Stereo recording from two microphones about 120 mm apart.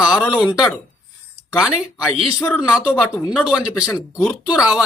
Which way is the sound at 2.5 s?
5° right (ahead or behind).